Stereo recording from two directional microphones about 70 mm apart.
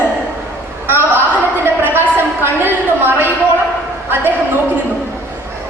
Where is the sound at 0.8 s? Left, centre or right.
Right.